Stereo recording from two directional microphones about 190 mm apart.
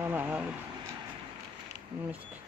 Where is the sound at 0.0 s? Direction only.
10° right (ahead or behind).